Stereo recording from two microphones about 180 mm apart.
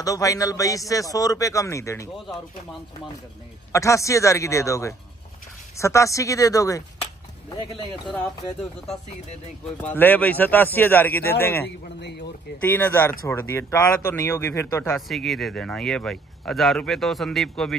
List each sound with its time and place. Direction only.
0.0 s a man's voice: 20° left (ahead or behind)
3.7 s a man's voice: 15° left (ahead or behind)
9.8 s speech: 10° left (ahead or behind)
12.0 s speech: 70° left (ahead or behind)
12.7 s speech: 10° left (ahead or behind)
15.0 s speech: centre (ahead or behind)